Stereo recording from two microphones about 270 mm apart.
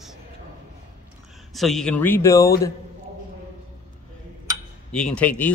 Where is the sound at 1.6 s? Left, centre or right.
Centre.